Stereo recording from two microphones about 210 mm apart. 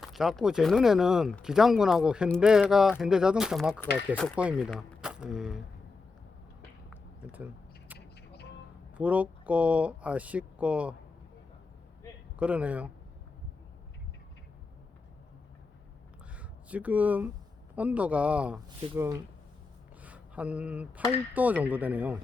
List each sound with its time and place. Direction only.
0.0 s speech: centre (ahead or behind)
6.9 s a sound: 5° right (ahead or behind)
7.9 s single-lens reflex camera: 50° left (ahead or behind)
9.0 s speech: 5° right (ahead or behind)
12.4 s speech: 5° right (ahead or behind)
16.3 s speech: 5° right (ahead or behind)